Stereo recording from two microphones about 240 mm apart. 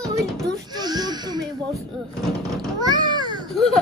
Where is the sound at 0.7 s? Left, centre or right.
Centre.